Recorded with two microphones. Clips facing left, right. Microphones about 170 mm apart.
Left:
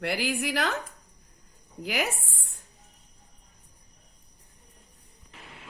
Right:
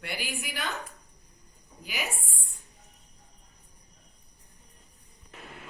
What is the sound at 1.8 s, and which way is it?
Speech, 90° left.